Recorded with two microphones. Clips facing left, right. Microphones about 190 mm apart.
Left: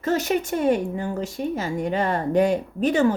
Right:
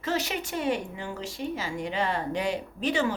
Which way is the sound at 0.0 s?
45° left (ahead or behind).